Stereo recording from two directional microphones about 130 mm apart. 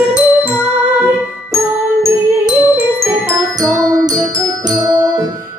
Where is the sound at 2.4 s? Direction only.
10° right (ahead or behind).